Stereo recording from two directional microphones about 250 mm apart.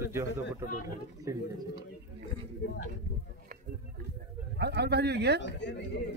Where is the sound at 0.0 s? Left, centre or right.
Centre.